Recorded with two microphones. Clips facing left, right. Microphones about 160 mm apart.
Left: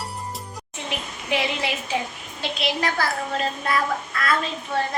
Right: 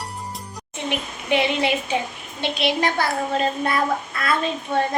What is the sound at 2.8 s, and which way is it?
A child's voice, 25° right (ahead or behind).